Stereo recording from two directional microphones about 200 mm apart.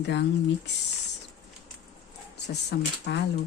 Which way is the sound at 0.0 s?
60° left (ahead or behind).